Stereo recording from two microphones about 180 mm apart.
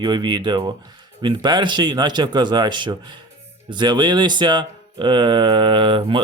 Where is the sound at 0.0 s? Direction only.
25° right (ahead or behind).